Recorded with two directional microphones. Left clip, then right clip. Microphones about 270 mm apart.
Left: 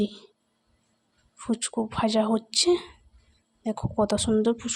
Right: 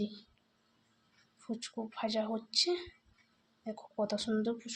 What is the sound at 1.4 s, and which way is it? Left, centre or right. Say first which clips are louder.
Speech: left 12 dB; left.